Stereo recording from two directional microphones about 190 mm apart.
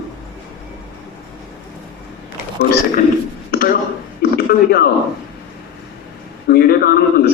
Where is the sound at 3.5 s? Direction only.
50° left (ahead or behind).